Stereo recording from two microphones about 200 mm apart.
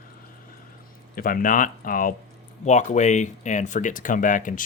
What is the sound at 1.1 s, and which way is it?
Speech, 45° left (ahead or behind).